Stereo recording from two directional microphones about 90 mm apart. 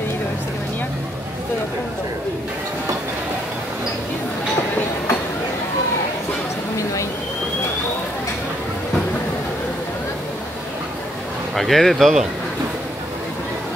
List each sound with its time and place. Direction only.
11.5 s speech: centre (ahead or behind)